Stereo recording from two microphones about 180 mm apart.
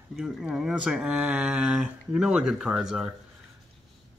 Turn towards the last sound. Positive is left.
turn(degrees=-5)  # may be behind; listen again after turning